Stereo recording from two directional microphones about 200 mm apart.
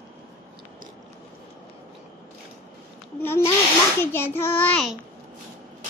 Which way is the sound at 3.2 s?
10° left (ahead or behind).